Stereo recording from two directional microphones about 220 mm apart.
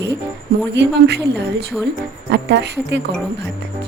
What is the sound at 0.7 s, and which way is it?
A woman's voice, 50° right (ahead or behind).